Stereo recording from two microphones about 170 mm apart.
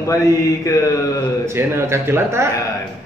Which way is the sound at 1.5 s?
15° right (ahead or behind).